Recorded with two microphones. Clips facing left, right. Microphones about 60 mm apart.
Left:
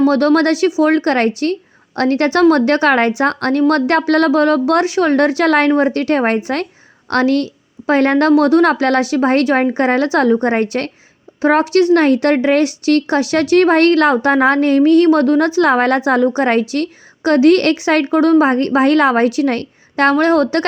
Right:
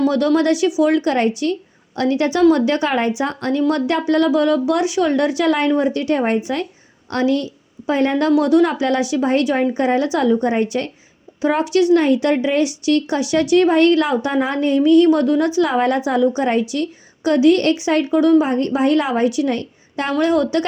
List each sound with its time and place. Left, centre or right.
0.1 s a woman's voice: left
8.3 s speech: left
11.3 s speech: left